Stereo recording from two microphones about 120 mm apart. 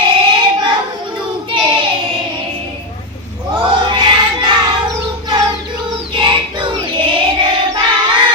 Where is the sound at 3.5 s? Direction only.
45° right (ahead or behind).